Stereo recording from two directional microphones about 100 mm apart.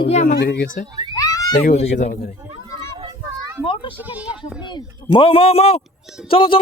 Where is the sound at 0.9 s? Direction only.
45° right (ahead or behind).